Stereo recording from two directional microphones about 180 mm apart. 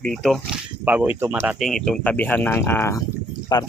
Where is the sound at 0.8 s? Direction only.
10° right (ahead or behind).